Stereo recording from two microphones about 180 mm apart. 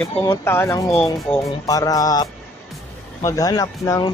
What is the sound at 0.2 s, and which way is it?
Speech, 15° left (ahead or behind).